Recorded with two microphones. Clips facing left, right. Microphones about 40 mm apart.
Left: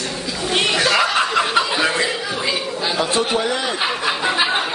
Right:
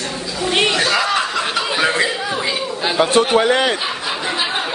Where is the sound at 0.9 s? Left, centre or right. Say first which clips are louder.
Left 1 dB; centre.